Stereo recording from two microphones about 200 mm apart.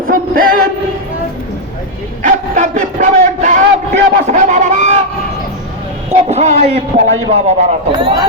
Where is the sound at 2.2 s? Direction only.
40° right (ahead or behind).